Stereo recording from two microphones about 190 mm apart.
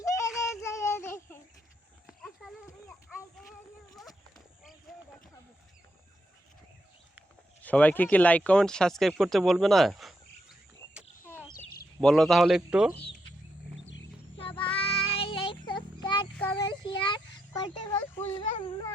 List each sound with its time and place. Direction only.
0.0 s child singing: 15° left (ahead or behind)
2.0 s horse: centre (ahead or behind)
7.6 s speech: 10° left (ahead or behind)
11.9 s speech: 5° left (ahead or behind)
14.3 s music: 25° left (ahead or behind)
14.8 s child singing: 30° left (ahead or behind)
16.6 s a sound: 25° left (ahead or behind)